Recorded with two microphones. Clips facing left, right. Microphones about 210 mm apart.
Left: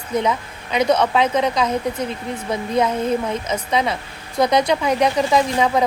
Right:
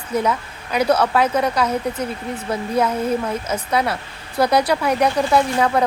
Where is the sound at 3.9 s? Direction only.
10° right (ahead or behind).